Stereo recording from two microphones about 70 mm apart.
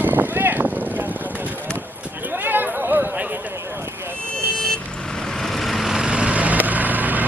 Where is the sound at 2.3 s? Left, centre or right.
Right.